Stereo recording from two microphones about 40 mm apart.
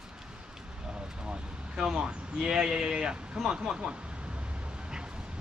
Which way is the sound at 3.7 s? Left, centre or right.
Right.